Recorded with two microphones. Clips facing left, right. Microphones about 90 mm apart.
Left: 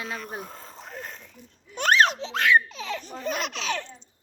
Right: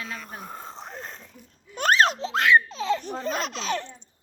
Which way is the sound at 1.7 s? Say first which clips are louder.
Even; 40° right (ahead or behind).